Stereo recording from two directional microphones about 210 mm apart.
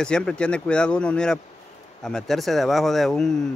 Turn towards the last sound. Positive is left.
turn(degrees=0)  # may be behind; listen again after turning